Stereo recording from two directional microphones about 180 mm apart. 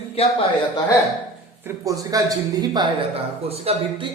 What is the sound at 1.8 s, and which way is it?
Speech, 20° right (ahead or behind).